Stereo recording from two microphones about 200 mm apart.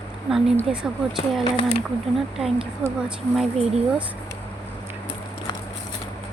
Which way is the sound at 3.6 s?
30° right (ahead or behind).